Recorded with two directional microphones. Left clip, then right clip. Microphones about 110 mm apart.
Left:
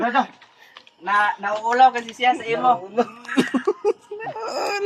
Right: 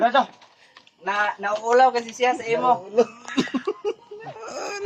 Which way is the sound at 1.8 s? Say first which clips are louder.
Left 2 dB; 65° right (ahead or behind).